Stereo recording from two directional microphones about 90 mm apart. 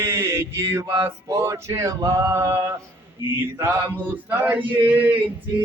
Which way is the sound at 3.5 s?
25° right (ahead or behind).